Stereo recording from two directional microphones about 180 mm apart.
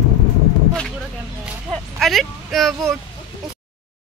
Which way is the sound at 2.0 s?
Centre (ahead or behind).